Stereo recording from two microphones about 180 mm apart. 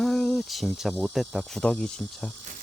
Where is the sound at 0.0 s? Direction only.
Centre (ahead or behind).